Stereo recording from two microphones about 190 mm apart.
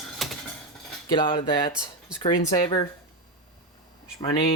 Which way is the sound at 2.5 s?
20° left (ahead or behind).